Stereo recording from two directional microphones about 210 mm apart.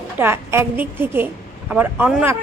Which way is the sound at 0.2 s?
10° right (ahead or behind).